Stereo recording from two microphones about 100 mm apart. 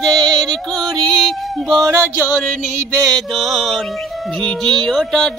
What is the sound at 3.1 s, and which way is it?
Female singing, centre (ahead or behind).